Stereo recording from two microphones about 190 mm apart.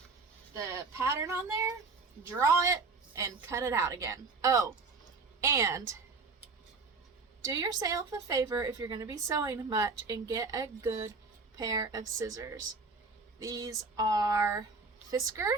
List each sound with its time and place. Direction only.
0.5 s a woman's voice: 15° right (ahead or behind)
7.4 s a woman's voice: 20° right (ahead or behind)